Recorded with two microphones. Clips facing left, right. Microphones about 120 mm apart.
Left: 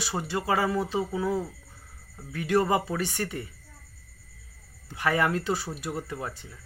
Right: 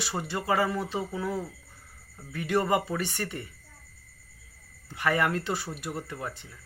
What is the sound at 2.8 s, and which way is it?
Speech, centre (ahead or behind).